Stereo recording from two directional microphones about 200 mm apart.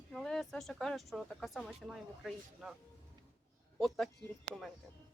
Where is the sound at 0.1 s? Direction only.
Centre (ahead or behind).